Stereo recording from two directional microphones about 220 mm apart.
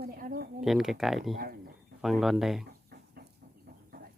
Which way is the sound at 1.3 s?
40° right (ahead or behind).